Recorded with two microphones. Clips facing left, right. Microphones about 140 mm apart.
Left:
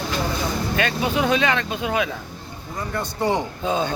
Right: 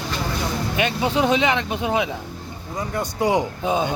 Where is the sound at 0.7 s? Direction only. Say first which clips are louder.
Right 2 dB; 20° right (ahead or behind).